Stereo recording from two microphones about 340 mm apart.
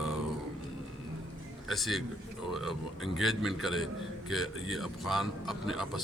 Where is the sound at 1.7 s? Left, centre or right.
Centre.